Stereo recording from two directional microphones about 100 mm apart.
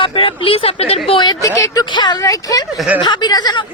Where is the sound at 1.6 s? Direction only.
35° left (ahead or behind).